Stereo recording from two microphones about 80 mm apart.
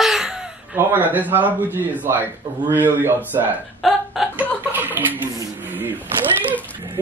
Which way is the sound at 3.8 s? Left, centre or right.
Centre.